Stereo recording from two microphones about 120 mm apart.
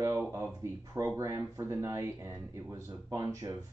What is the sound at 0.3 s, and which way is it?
Speech, 25° right (ahead or behind).